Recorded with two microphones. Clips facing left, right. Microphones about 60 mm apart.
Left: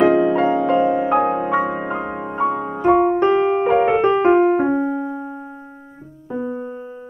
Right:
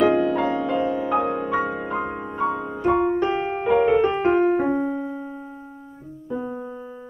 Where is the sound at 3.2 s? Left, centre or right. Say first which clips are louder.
Left 7 dB; left.